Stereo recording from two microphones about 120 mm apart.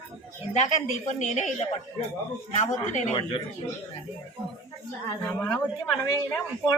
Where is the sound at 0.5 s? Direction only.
80° left.